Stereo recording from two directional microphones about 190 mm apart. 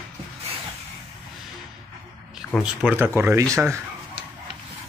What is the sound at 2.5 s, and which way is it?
Speech, 5° right (ahead or behind).